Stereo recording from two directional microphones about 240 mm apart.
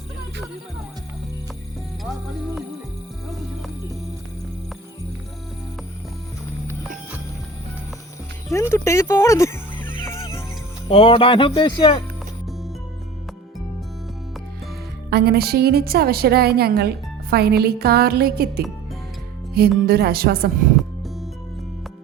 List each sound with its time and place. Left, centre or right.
8.7 s music: centre
10.8 s speech: left
15.1 s a woman's voice: right